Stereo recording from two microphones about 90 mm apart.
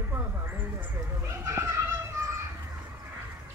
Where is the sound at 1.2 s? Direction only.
30° right (ahead or behind).